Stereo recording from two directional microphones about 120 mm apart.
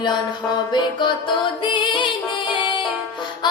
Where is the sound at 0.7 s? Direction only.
40° left (ahead or behind).